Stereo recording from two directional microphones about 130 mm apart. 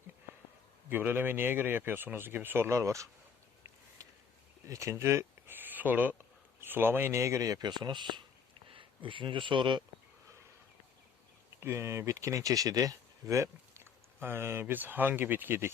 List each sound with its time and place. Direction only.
0.9 s speech: 15° right (ahead or behind)
4.0 s a sound: 25° right (ahead or behind)
4.6 s speech: 25° right (ahead or behind)
11.6 s speech: 20° right (ahead or behind)